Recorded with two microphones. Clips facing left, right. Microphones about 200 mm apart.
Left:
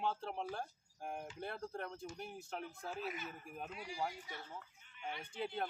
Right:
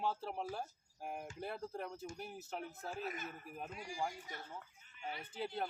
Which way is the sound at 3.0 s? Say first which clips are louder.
Even; 50° right (ahead or behind).